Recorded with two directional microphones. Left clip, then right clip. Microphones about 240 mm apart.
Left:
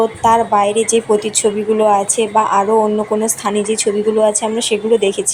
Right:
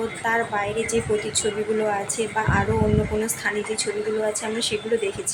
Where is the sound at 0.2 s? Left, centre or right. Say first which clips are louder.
Left 11 dB; left.